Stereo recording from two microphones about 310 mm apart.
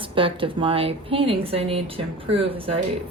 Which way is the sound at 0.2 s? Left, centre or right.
Centre.